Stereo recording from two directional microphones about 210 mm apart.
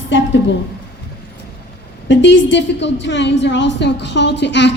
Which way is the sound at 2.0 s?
60° left (ahead or behind).